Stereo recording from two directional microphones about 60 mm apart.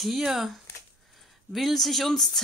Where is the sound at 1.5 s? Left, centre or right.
Centre.